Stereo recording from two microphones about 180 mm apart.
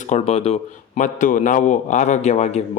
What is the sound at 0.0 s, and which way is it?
A man's voice, 35° left (ahead or behind).